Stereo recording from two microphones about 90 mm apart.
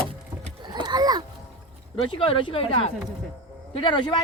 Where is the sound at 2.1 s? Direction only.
85° left.